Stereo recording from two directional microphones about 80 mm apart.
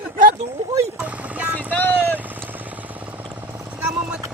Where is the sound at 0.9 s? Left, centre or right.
Centre.